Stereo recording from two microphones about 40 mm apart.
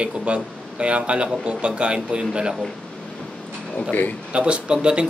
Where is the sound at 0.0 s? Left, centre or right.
Right.